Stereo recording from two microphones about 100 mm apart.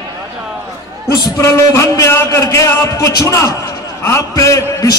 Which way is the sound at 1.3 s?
30° left (ahead or behind).